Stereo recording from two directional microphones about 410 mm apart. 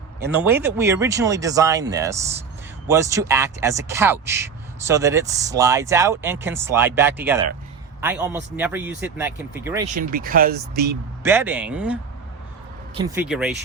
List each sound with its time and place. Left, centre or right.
0.2 s a man's voice: centre
9.9 s speech: right
11.2 s a man's voice: centre